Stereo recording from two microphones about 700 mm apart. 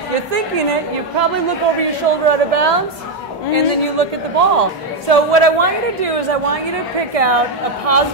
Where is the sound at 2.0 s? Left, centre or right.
Right.